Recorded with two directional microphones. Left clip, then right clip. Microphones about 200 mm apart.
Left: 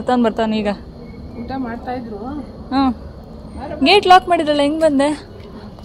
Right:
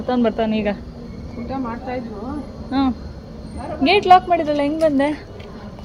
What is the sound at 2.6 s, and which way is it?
A woman's voice, 15° left (ahead or behind).